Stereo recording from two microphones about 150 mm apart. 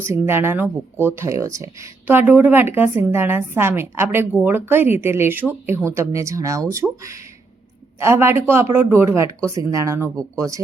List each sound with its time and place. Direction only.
0.0 s speech: 15° right (ahead or behind)